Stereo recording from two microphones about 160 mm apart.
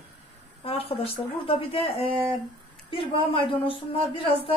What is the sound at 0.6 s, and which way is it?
A woman's voice, 35° left (ahead or behind).